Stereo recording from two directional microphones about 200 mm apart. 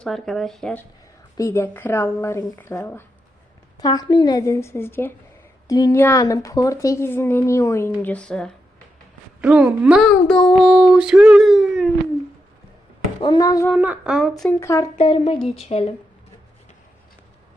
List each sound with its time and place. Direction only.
0.0 s a woman's voice: centre (ahead or behind)
13.2 s a woman's voice: 20° left (ahead or behind)
13.7 s speech: 5° right (ahead or behind)
14.5 s a woman's voice: 15° left (ahead or behind)
14.9 s speech: 25° left (ahead or behind)